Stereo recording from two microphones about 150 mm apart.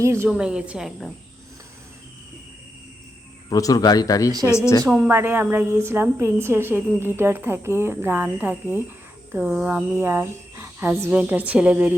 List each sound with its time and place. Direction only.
0.0 s speech: 15° right (ahead or behind)
0.3 s a woman's voice: 5° right (ahead or behind)
3.5 s a man's voice: 25° left (ahead or behind)
4.9 s speech: 15° right (ahead or behind)